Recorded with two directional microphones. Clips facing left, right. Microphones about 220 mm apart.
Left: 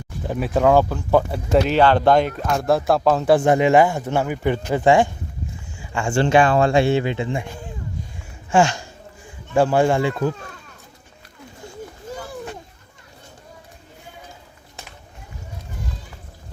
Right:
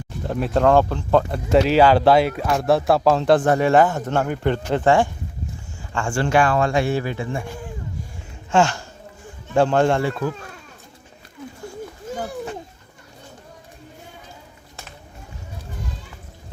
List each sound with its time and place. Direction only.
0.3 s speech: 5° left (ahead or behind)
10.0 s speech: 15° left (ahead or behind)